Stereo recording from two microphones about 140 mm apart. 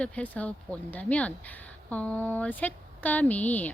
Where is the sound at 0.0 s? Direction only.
10° left (ahead or behind).